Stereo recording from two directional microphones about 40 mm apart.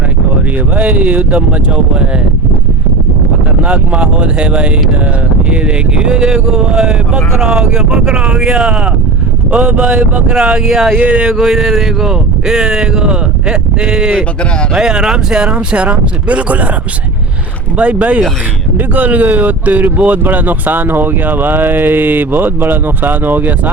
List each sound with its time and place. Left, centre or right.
0.8 s speech: right
3.6 s speech: right
6.0 s speech: right
6.6 s speech: centre
8.1 s speech: right; by 10.9 s centre
10.9 s speech: right
11.3 s speech: centre
14.0 s speech: right
14.8 s speech: centre
15.4 s speech: right
17.7 s speech: right